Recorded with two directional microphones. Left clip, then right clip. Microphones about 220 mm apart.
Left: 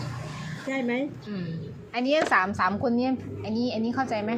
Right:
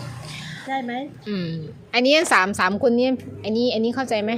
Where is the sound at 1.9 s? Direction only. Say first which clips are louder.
Right 6 dB; 50° right (ahead or behind).